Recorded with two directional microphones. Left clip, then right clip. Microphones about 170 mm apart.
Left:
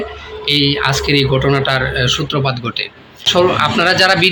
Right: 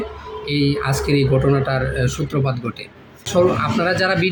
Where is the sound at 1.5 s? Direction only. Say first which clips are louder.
Left 6 dB; 15° right (ahead or behind).